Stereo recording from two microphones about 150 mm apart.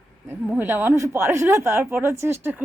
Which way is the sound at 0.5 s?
15° right (ahead or behind).